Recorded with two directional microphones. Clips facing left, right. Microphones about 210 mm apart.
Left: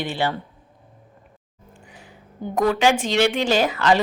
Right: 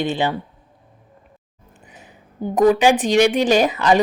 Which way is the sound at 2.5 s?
20° right (ahead or behind).